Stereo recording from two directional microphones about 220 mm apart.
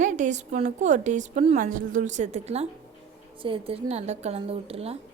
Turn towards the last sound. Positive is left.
turn(degrees=-25)  # may be behind; listen again after turning